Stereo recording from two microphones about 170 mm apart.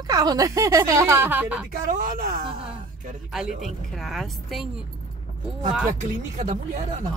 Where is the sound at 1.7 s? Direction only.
50° right (ahead or behind).